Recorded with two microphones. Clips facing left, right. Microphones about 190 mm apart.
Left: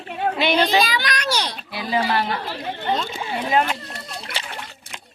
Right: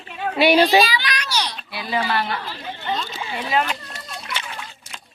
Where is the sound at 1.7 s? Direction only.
40° left (ahead or behind).